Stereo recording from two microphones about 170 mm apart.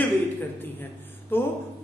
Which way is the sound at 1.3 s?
10° left (ahead or behind).